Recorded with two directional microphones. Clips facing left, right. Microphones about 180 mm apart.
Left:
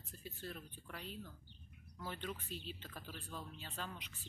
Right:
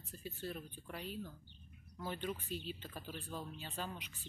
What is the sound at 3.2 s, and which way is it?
Speech, 25° right (ahead or behind).